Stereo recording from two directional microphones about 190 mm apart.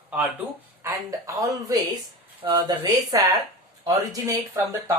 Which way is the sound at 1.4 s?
20° right (ahead or behind).